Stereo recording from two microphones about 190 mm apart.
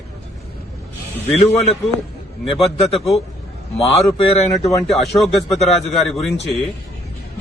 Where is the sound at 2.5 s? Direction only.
30° left (ahead or behind).